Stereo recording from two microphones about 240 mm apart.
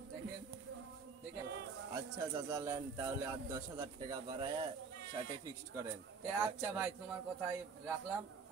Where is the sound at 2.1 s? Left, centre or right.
Centre.